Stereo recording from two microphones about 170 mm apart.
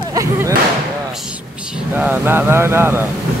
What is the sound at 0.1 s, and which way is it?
Speech, 20° right (ahead or behind).